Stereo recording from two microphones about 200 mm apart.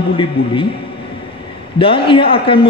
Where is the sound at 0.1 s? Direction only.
25° left (ahead or behind).